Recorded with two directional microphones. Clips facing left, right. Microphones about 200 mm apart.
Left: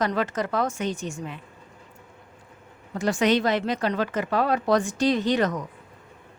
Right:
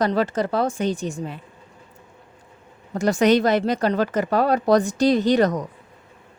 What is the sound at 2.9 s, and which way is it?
Speech, 40° right (ahead or behind).